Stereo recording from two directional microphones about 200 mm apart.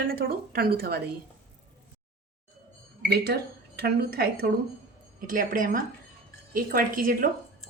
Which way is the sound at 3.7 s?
50° right (ahead or behind).